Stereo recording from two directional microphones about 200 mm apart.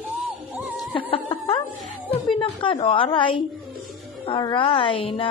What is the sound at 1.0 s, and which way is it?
Music, 30° left (ahead or behind).